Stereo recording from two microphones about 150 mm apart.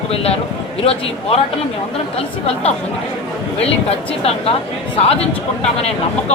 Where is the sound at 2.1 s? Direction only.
40° left (ahead or behind).